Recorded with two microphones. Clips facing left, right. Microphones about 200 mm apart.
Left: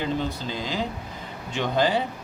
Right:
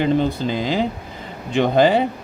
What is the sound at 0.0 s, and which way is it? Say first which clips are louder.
Speech: right 9 dB; 65° right (ahead or behind).